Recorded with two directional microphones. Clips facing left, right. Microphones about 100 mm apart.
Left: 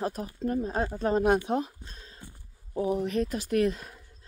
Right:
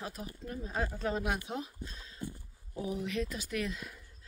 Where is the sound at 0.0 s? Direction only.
45° left (ahead or behind).